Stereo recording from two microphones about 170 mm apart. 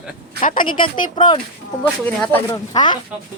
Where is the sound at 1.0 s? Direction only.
25° left (ahead or behind).